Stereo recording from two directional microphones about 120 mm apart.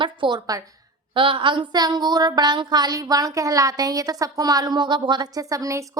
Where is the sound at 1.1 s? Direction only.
45° right (ahead or behind).